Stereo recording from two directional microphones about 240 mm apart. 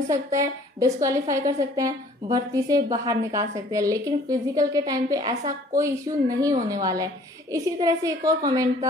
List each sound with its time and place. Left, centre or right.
0.1 s a woman's voice: centre